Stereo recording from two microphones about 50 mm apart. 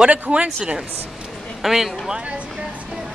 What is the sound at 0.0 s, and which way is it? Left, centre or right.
Speech, right.